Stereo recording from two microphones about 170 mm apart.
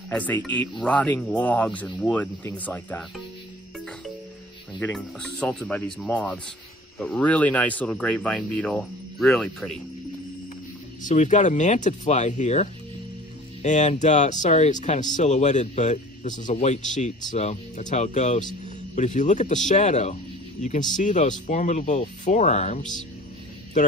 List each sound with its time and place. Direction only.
0.1 s speech: 10° left (ahead or behind)
4.7 s speech: 5° left (ahead or behind)
11.0 s speech: 45° left (ahead or behind)